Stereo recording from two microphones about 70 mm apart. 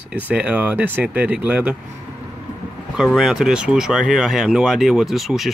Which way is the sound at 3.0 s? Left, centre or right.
Centre.